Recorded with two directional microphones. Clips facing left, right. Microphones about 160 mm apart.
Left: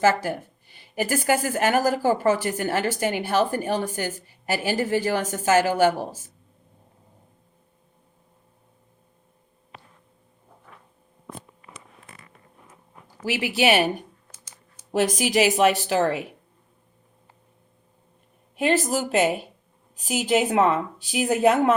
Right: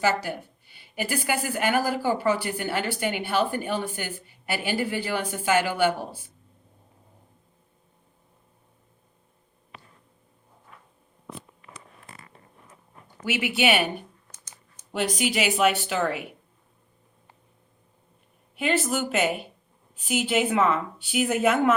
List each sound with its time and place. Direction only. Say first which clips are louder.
0.0 s a woman's voice: left 4 dB; 45° left (ahead or behind)
13.2 s a woman's voice: left 2 dB; 35° left (ahead or behind)
14.3 s a sound: left 1 dB; 10° left (ahead or behind)
15.0 s a woman's voice: left 4 dB; 45° left (ahead or behind)
18.6 s a woman's voice: left 3 dB; 40° left (ahead or behind)